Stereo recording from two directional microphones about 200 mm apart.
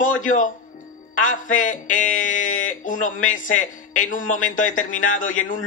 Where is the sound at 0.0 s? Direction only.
40° left (ahead or behind).